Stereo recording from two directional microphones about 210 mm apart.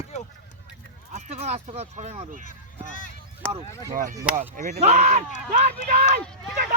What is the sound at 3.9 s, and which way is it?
Speech, 40° right (ahead or behind).